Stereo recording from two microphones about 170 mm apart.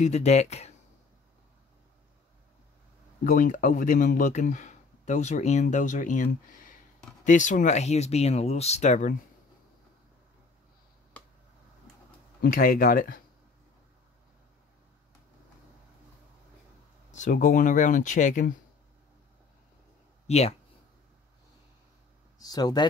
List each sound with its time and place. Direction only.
0.0 s speech: 40° left (ahead or behind)
3.3 s speech: 50° left (ahead or behind)
12.4 s speech: 55° left (ahead or behind)
17.1 s speech: 45° left (ahead or behind)
20.2 s speech: 40° left (ahead or behind)
22.4 s speech: 20° left (ahead or behind)